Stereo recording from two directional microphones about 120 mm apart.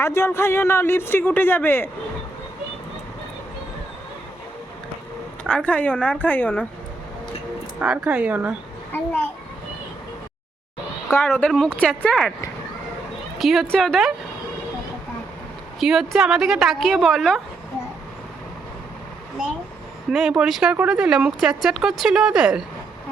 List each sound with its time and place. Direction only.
0.0 s speech: 20° left (ahead or behind)
5.4 s speech: 10° left (ahead or behind)
7.8 s speech: 10° right (ahead or behind)
8.9 s speech: 20° left (ahead or behind)
11.3 s speech: 5° left (ahead or behind)
13.4 s speech: centre (ahead or behind)
15.8 s speech: 5° right (ahead or behind)
20.1 s speech: 5° right (ahead or behind)